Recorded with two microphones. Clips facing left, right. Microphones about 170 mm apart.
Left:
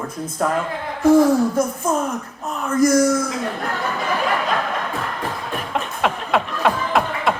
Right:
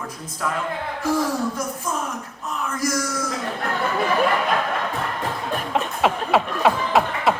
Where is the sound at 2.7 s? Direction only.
55° left (ahead or behind).